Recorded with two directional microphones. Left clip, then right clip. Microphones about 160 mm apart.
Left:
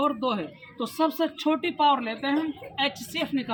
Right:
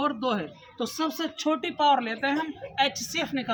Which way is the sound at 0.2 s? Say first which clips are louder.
Even; 15° right (ahead or behind).